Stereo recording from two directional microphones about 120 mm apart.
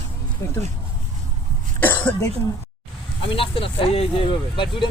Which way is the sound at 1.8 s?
15° left (ahead or behind).